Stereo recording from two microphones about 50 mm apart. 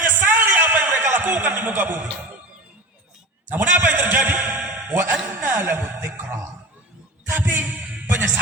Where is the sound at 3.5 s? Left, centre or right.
Right.